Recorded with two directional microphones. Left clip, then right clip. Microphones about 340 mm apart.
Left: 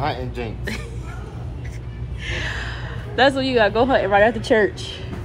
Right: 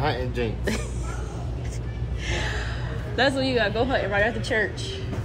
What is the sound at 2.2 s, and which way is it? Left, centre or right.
Gasp, centre.